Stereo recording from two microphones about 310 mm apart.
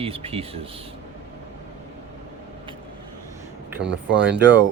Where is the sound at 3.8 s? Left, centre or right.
Right.